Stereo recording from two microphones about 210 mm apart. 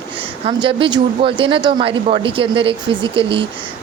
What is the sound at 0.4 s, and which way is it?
Speech, 25° right (ahead or behind).